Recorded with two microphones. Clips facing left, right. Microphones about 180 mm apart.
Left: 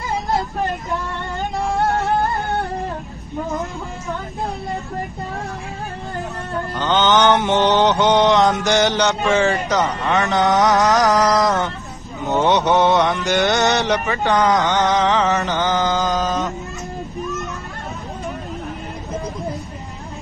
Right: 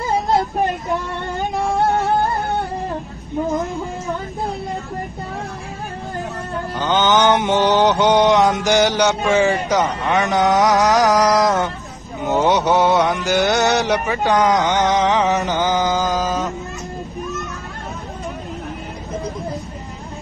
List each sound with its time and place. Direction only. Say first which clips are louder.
6.8 s music: even; 15° right (ahead or behind)
12.4 s mantra: even; centre (ahead or behind)
14.0 s music: right 1 dB; 10° right (ahead or behind)
15.9 s mantra: even; centre (ahead or behind)